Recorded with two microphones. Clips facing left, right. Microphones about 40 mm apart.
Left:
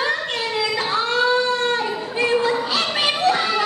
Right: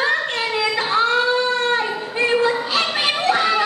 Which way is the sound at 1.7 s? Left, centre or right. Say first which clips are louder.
Right 1 dB; centre.